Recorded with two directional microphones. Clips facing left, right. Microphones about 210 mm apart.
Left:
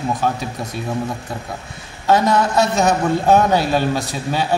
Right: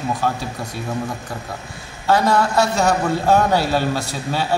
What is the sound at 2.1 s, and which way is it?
A man's voice, 20° left (ahead or behind).